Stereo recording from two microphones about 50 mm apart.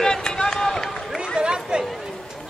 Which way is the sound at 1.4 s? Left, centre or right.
Centre.